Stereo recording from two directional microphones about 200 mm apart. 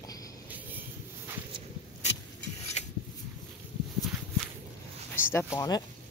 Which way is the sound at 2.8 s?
35° left (ahead or behind).